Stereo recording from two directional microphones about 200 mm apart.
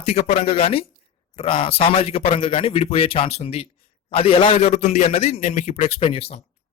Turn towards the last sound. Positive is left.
turn(degrees=30)  # may be behind; listen again after turning